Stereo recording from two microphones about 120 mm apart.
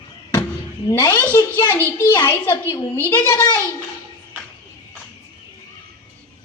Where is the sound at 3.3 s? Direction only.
30° left (ahead or behind).